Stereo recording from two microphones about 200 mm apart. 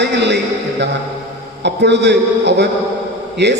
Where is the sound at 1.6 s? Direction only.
60° right (ahead or behind).